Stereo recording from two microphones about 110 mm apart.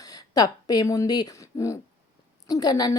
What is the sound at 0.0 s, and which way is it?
A woman's voice, 35° left (ahead or behind).